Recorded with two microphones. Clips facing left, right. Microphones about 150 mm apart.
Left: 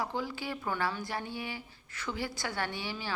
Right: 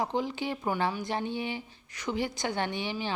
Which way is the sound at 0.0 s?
20° right (ahead or behind).